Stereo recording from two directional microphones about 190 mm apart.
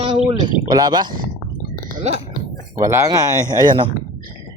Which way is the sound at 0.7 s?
20° right (ahead or behind).